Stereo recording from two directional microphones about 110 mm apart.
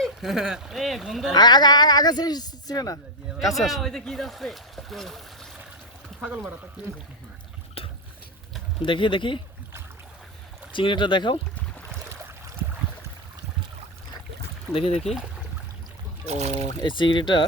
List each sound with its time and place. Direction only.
0.0 s speech: centre (ahead or behind)
1.3 s speech: 40° left (ahead or behind)
3.4 s speech: centre (ahead or behind)
6.1 s speech: 10° right (ahead or behind)
7.8 s boat: 60° left (ahead or behind)
8.8 s speech: 50° left (ahead or behind)
10.7 s speech: 50° left (ahead or behind)
14.7 s speech: 65° left (ahead or behind)
16.2 s speech: 85° right
16.8 s speech: 45° left (ahead or behind)